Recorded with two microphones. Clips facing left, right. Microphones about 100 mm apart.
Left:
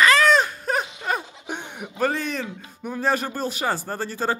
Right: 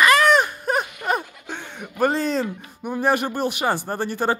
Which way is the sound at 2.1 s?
35° right (ahead or behind).